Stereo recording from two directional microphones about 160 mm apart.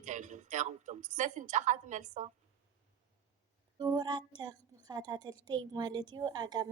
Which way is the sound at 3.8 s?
25° right (ahead or behind).